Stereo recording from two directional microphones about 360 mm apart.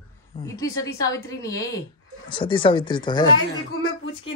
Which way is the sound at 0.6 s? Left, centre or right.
Centre.